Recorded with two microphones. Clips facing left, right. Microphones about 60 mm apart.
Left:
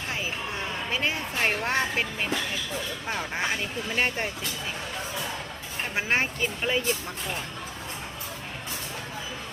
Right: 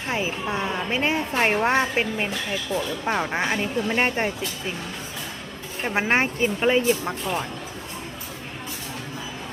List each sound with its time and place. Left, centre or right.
0.1 s speech: right
5.9 s speech: right